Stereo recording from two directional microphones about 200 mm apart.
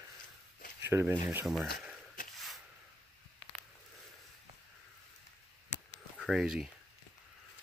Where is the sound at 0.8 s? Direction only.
10° right (ahead or behind).